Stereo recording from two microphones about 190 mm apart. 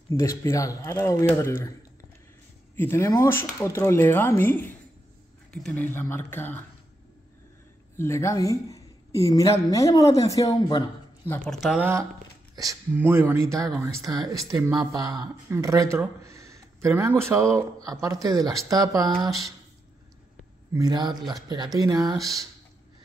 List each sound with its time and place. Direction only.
0.4 s speech: 15° left (ahead or behind)
2.7 s speech: 10° left (ahead or behind)
8.0 s a woman's voice: 15° left (ahead or behind)
11.5 s speech: 5° right (ahead or behind); by 19.3 s 20° right (ahead or behind)
20.7 s speech: 20° right (ahead or behind)